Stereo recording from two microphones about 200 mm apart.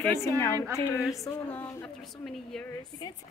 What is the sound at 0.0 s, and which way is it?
A woman's voice, 15° left (ahead or behind).